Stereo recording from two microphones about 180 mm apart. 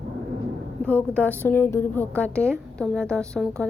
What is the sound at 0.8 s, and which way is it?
A woman's voice, 5° left (ahead or behind).